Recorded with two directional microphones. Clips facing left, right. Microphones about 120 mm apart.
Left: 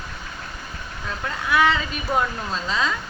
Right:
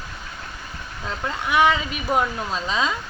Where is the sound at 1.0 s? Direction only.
20° right (ahead or behind).